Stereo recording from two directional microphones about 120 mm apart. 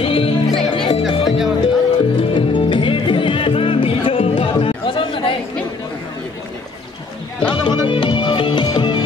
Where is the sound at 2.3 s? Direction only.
45° left (ahead or behind).